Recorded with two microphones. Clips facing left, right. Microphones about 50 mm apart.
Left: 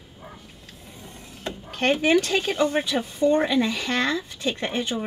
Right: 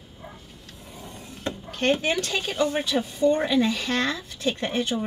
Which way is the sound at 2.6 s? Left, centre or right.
Centre.